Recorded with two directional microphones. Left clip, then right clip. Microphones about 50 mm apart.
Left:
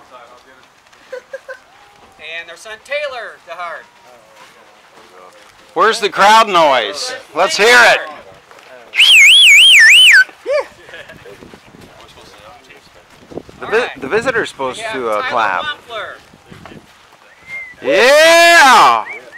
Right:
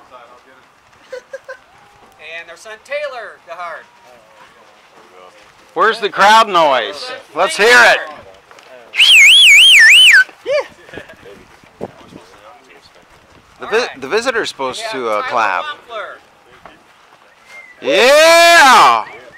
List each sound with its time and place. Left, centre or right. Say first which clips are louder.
1.1 s a sound: left 1 dB; right
2.1 s speech: left 2 dB; centre
5.8 s speech: left 1 dB; left
7.5 s a man's voice: even; left
8.9 s alarm: even; centre
10.4 s dog: even; right
12.0 s a sound: left 1 dB; centre
13.6 s a sound: left 1 dB; centre
13.9 s speech: left 1 dB; centre
17.7 s speech: even; centre